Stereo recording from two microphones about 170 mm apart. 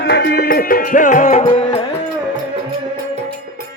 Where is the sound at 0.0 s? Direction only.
75° left (ahead or behind); by 1.5 s 45° left (ahead or behind).